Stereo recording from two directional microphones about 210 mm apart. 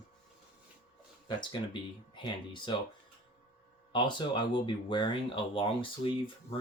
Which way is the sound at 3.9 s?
20° left (ahead or behind).